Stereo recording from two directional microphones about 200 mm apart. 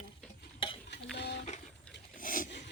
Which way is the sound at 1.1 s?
60° left (ahead or behind).